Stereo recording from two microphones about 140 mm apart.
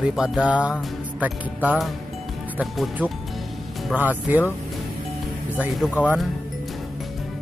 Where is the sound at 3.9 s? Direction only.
15° right (ahead or behind).